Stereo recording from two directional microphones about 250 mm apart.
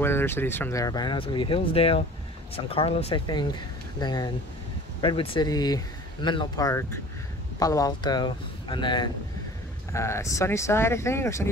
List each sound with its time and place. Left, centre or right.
0.0 s speech: centre